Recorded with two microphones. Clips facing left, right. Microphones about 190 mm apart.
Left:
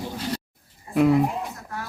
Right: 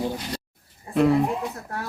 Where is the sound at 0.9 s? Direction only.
5° left (ahead or behind).